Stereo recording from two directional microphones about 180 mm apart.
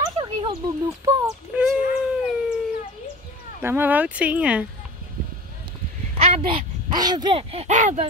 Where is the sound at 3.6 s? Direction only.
10° right (ahead or behind).